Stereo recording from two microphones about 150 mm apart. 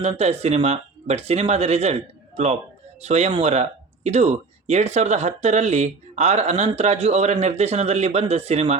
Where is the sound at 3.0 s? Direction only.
45° right (ahead or behind).